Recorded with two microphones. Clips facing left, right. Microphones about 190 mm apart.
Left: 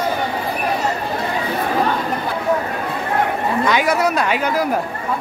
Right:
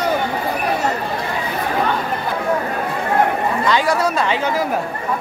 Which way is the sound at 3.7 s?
15° left (ahead or behind).